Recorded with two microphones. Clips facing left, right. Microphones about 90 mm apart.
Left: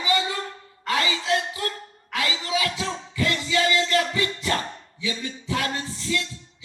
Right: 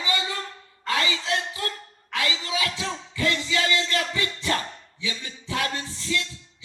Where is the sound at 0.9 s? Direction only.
30° left (ahead or behind).